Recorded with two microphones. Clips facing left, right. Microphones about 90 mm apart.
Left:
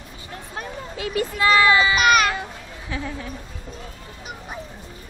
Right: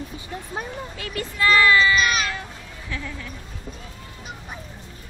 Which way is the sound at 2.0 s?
60° left (ahead or behind).